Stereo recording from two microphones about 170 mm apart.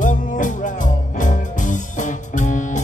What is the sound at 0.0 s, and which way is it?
Music, 50° left (ahead or behind).